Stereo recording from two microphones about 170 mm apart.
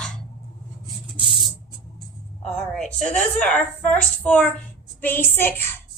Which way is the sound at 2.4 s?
5° left (ahead or behind).